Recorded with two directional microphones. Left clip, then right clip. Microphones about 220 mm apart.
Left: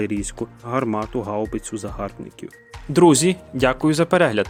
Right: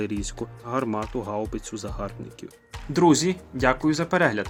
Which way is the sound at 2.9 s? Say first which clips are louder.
Left 5 dB; 45° left (ahead or behind).